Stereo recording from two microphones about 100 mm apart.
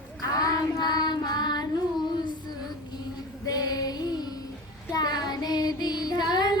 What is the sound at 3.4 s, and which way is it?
Child singing, 40° left (ahead or behind).